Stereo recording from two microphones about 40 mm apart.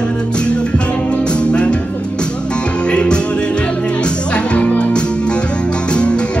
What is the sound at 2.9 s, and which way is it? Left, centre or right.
Music, left.